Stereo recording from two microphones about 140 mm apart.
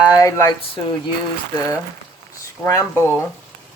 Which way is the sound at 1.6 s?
25° left (ahead or behind).